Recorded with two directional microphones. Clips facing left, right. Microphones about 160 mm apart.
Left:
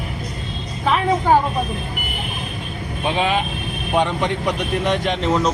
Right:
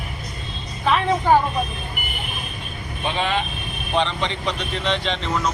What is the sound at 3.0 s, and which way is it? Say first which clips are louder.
Speech: left 3 dB; 10° left (ahead or behind).